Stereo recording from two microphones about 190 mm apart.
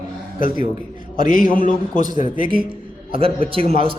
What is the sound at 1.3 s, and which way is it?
Speech, 45° left (ahead or behind).